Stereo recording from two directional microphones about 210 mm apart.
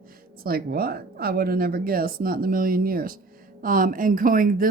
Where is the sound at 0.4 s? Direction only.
45° right (ahead or behind).